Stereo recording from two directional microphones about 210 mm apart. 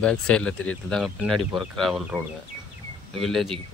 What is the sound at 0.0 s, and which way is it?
Speech, 5° left (ahead or behind).